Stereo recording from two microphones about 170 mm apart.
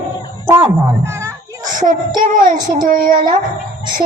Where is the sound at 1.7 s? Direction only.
50° right (ahead or behind).